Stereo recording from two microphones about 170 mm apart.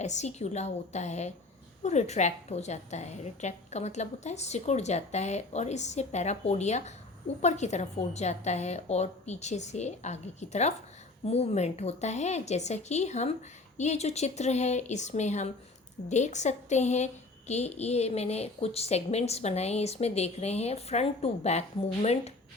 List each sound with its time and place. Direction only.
0.0 s a woman's voice: 40° left (ahead or behind)